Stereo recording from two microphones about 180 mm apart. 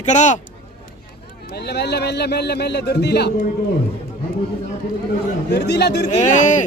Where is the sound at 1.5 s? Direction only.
65° left (ahead or behind).